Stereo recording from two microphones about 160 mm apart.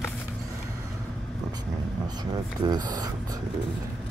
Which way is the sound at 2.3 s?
25° right (ahead or behind).